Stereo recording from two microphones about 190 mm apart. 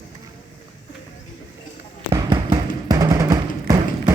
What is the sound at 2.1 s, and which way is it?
Music, 20° right (ahead or behind).